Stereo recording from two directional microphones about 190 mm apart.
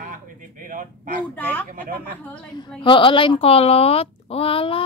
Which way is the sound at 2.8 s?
25° left (ahead or behind).